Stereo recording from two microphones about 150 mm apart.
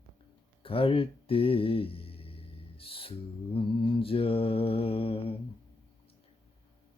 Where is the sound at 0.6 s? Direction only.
40° left (ahead or behind).